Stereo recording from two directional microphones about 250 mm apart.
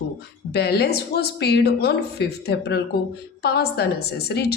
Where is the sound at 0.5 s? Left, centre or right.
Left.